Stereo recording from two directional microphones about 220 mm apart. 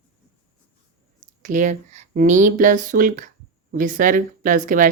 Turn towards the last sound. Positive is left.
turn(degrees=-35)  # may be behind; listen again after turning